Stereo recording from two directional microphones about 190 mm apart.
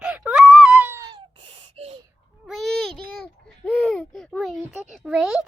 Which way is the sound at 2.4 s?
Centre (ahead or behind).